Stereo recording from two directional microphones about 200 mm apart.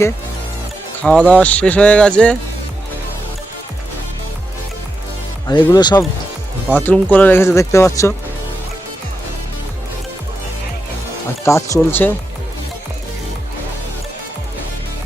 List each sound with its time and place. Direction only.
1.0 s speech: 5° left (ahead or behind)
5.5 s speech: 20° left (ahead or behind)
6.7 s speech: 10° left (ahead or behind)
11.4 s speech: 15° left (ahead or behind)